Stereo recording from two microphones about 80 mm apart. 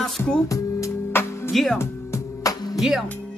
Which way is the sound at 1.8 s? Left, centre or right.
Left.